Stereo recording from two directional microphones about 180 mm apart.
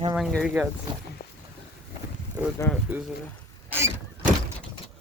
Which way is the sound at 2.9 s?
10° right (ahead or behind).